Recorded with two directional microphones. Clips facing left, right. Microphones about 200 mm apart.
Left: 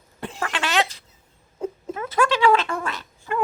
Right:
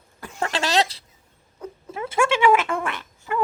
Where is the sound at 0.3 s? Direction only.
35° right (ahead or behind).